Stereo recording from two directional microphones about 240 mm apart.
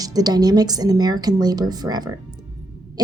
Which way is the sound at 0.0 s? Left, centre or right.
Centre.